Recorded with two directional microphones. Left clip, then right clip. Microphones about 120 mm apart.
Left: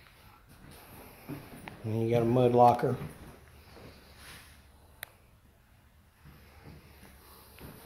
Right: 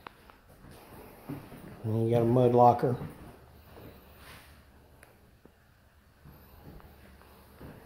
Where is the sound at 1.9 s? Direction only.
35° right (ahead or behind).